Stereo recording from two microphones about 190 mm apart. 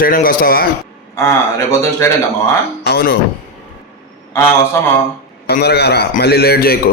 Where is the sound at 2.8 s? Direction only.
55° left (ahead or behind).